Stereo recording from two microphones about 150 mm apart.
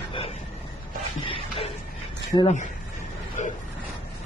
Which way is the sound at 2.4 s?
55° left (ahead or behind).